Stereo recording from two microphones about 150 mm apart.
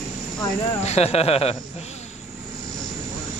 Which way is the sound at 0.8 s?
45° left (ahead or behind).